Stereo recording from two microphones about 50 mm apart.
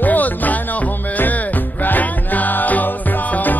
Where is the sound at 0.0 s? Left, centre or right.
Left.